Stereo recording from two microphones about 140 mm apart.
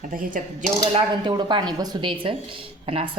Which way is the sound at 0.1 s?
75° right (ahead or behind).